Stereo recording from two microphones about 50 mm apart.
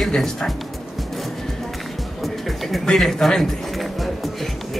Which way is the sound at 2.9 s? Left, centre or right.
Centre.